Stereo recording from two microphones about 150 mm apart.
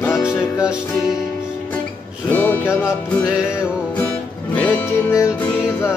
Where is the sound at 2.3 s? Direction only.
10° left (ahead or behind).